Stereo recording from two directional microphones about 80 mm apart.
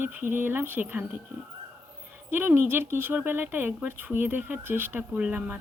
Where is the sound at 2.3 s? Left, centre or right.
Right.